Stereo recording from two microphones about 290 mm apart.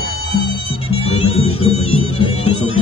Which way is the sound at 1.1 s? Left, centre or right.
Left.